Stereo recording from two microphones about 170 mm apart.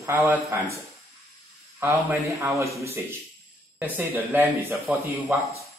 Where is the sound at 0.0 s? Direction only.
15° right (ahead or behind).